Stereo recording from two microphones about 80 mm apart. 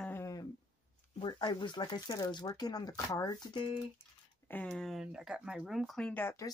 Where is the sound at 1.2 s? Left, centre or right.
Left.